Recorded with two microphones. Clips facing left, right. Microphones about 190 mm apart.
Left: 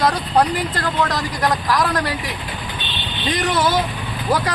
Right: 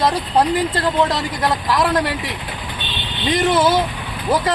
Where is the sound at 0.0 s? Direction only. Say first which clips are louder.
Even; 25° right (ahead or behind).